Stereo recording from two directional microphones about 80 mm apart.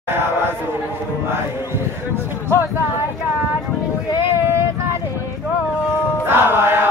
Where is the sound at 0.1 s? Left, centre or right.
Right.